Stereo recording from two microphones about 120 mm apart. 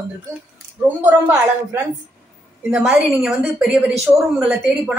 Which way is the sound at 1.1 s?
20° right (ahead or behind).